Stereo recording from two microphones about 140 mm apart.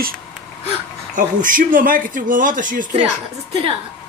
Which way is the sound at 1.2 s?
70° right (ahead or behind).